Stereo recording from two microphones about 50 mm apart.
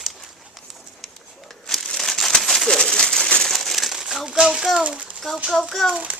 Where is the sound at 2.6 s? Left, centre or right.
Centre.